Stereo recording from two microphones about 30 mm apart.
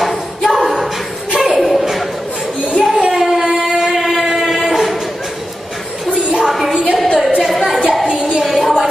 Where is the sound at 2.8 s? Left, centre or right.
Centre.